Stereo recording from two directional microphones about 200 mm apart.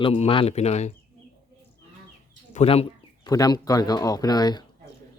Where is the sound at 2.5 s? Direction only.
30° left (ahead or behind).